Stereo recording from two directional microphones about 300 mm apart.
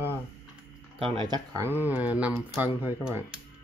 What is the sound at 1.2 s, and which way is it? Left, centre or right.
Speech, centre.